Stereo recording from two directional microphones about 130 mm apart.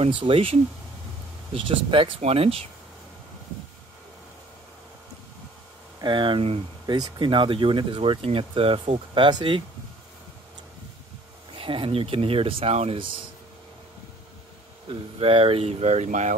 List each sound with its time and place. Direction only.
0.0 s speech: 45° right (ahead or behind)
5.9 s speech: 35° right (ahead or behind)
11.5 s speech: 45° right (ahead or behind)
14.9 s speech: 45° right (ahead or behind); by 16.3 s 70° right (ahead or behind)